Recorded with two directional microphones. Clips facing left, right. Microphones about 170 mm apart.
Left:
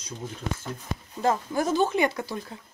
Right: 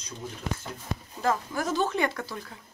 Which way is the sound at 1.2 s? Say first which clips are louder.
Left 3 dB; 25° left (ahead or behind).